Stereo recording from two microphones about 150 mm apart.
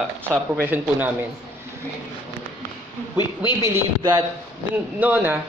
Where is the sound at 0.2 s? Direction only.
15° right (ahead or behind).